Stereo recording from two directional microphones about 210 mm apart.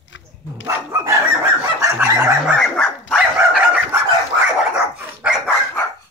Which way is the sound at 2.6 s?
5° left (ahead or behind).